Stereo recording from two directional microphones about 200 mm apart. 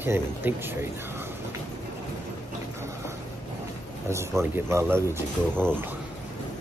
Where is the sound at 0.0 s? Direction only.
10° right (ahead or behind).